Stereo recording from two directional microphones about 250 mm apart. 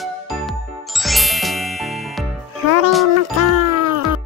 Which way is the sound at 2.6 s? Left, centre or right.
Right.